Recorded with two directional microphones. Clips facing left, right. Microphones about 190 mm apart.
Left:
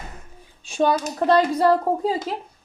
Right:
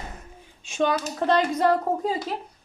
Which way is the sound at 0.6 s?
35° left (ahead or behind).